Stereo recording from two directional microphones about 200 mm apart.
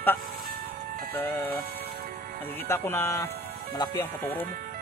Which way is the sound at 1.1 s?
10° left (ahead or behind).